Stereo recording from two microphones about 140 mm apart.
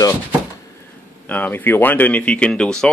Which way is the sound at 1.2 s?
10° left (ahead or behind).